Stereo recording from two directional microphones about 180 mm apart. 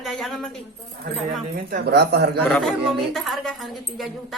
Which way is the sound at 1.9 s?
65° right (ahead or behind).